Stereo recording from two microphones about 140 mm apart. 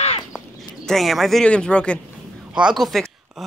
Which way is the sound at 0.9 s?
Centre (ahead or behind).